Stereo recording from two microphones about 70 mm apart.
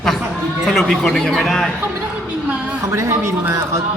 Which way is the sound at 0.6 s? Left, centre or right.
Centre.